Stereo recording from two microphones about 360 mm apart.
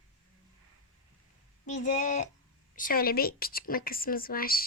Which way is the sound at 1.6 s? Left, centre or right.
Centre.